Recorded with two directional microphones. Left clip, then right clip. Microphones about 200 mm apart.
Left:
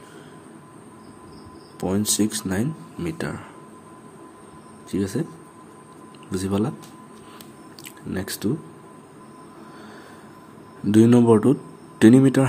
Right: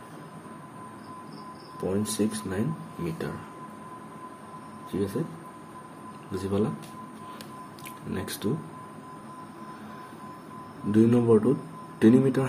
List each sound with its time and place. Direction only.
1.8 s speech: 60° left (ahead or behind)
4.9 s speech: 55° left (ahead or behind)
6.3 s speech: 55° left (ahead or behind)
8.1 s speech: 45° left (ahead or behind)
10.9 s speech: 55° left (ahead or behind)